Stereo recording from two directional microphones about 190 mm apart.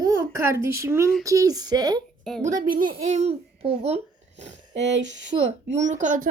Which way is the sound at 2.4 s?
40° right (ahead or behind).